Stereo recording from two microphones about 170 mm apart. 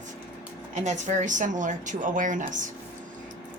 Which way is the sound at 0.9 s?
45° right (ahead or behind).